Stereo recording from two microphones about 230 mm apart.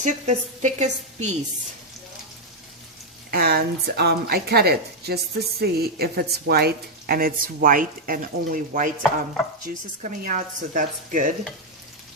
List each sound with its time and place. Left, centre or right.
0.0 s a woman's voice: right
3.3 s a woman's voice: right